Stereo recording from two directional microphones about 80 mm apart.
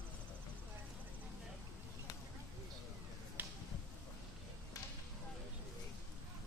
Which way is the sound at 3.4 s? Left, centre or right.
Right.